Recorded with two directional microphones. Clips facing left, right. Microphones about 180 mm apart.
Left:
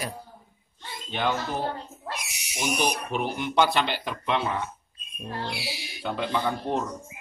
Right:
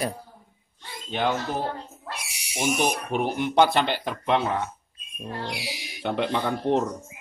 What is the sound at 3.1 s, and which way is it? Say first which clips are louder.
Speech: right 4 dB; 50° right (ahead or behind).